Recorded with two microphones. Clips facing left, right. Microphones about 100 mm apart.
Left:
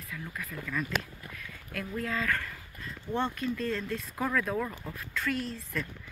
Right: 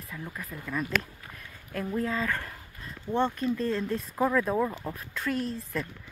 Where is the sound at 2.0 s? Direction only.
25° right (ahead or behind).